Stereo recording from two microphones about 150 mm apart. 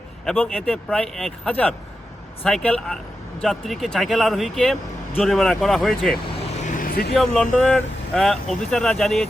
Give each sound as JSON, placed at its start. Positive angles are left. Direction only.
{"t": 0.3, "sound": "speech", "side_deg": 5}
{"t": 6.6, "sound": "vehicle", "side_deg": 60}
{"t": 7.1, "sound": "speech", "side_deg": 5}